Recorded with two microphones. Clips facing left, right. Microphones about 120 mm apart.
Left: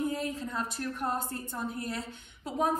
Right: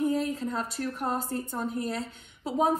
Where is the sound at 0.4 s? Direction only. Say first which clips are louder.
Right 3 dB; 30° right (ahead or behind).